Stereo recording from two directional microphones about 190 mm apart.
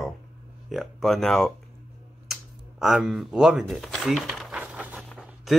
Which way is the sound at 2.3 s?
Centre (ahead or behind).